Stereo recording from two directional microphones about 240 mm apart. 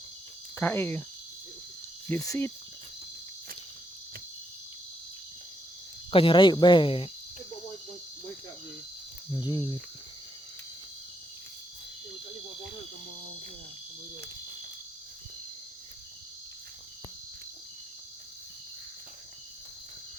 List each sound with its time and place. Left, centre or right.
0.5 s speech: centre
2.0 s speech: centre
6.1 s speech: left
9.3 s speech: centre